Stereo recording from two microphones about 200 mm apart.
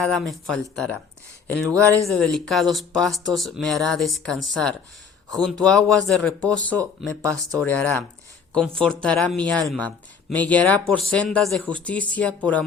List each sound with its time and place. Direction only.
0.0 s speech: centre (ahead or behind)
1.6 s speech: 15° right (ahead or behind)
2.1 s speech: 5° left (ahead or behind)